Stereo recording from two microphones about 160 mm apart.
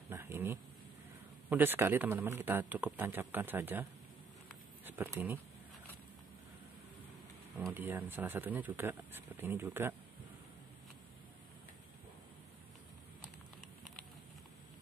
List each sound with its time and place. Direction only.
0.1 s a sound: 15° right (ahead or behind)
1.5 s speech: 15° right (ahead or behind)
4.8 s speech: 15° right (ahead or behind)
7.7 s speech: 10° right (ahead or behind)